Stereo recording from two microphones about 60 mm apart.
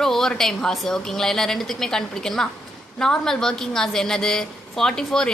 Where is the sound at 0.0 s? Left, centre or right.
Centre.